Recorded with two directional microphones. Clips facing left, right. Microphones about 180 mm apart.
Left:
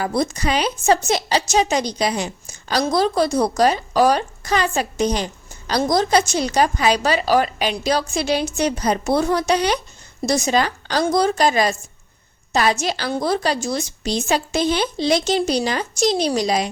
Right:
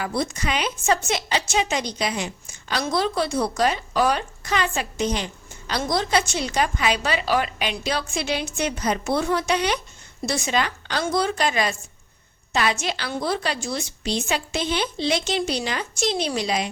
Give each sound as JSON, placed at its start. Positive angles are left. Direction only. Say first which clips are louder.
{"t": 0.0, "sound": "a woman's voice", "louder": "left 5 dB", "side_deg": 40}